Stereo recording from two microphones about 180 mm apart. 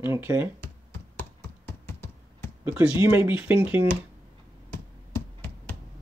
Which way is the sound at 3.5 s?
30° left (ahead or behind).